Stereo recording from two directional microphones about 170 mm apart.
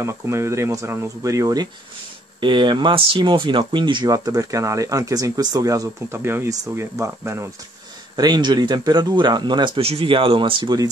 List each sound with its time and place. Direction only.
0.0 s speech: 15° right (ahead or behind)